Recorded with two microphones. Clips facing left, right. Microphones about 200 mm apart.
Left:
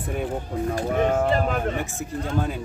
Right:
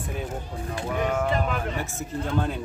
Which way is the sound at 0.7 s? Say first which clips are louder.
Left 3 dB; 45° left (ahead or behind).